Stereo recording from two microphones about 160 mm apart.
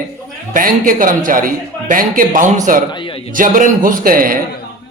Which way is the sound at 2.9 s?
30° left (ahead or behind).